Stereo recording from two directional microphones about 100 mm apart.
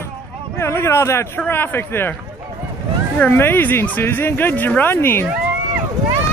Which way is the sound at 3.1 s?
20° left (ahead or behind).